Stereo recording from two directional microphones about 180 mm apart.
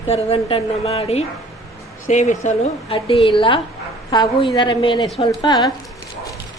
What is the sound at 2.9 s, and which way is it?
A woman's voice, 30° left (ahead or behind).